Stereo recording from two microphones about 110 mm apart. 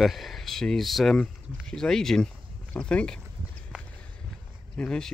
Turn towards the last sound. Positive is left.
turn(degrees=10)  # may be behind; listen again after turning